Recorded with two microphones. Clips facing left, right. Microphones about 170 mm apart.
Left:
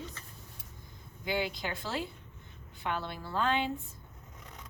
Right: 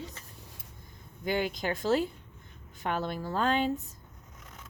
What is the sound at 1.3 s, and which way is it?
A woman's voice, 45° right (ahead or behind).